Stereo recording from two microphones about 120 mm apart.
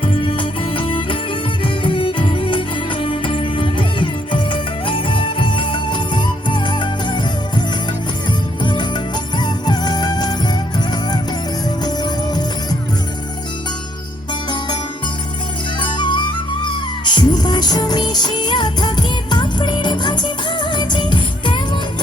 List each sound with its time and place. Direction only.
0.0 s music: 45° left (ahead or behind)
8.6 s music: 40° left (ahead or behind)
15.8 s music: 40° left (ahead or behind)